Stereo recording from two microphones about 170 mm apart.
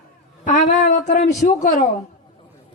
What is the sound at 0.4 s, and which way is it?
A woman's voice, 50° left (ahead or behind).